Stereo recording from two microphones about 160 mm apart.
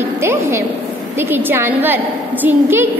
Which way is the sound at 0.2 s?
15° right (ahead or behind).